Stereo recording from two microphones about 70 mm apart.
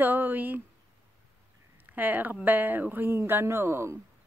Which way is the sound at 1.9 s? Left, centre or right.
Right.